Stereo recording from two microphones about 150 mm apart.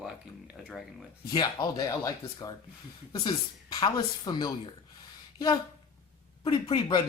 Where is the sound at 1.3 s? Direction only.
25° left (ahead or behind).